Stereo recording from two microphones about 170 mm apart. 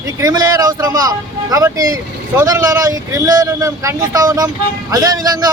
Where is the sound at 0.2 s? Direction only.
20° right (ahead or behind).